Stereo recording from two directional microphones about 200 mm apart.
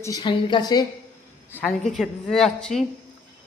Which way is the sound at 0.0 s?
20° left (ahead or behind).